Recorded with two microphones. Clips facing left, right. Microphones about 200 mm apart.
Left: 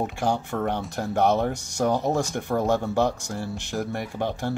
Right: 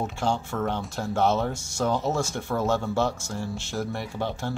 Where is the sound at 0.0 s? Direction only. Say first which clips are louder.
Left 2 dB; 15° left (ahead or behind).